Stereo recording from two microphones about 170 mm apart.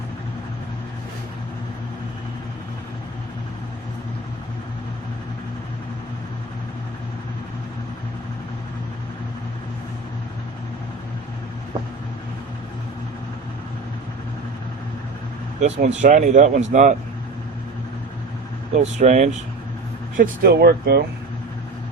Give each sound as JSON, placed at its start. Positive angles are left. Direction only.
{"t": 15.6, "sound": "speech", "side_deg": -45}
{"t": 18.7, "sound": "speech", "side_deg": -45}
{"t": 20.1, "sound": "speech", "side_deg": -55}